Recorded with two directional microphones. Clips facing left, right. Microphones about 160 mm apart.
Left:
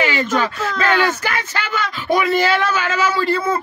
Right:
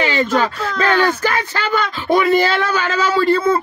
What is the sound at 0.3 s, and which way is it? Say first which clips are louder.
Speech: right 2 dB; centre (ahead or behind).